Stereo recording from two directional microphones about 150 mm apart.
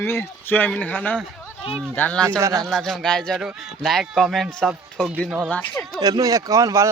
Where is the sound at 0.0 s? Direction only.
15° left (ahead or behind).